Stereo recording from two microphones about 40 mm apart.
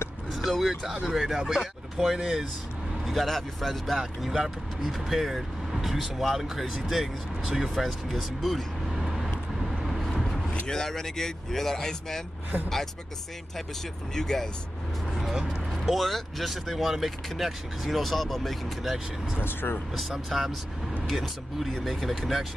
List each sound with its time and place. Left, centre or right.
0.3 s vehicle: centre
1.0 s speech: centre
3.1 s speech: centre
4.2 s speech: centre
7.7 s speech: centre
8.9 s vehicle: centre
10.7 s speech: centre
14.1 s speech: centre
15.1 s speech: centre
19.4 s speech: left
20.0 s speech: centre